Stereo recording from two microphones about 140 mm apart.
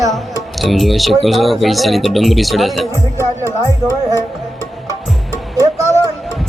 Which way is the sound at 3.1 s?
25° right (ahead or behind).